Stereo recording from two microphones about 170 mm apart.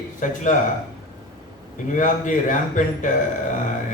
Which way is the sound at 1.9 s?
50° left (ahead or behind).